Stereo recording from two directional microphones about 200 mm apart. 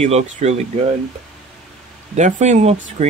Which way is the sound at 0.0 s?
35° right (ahead or behind).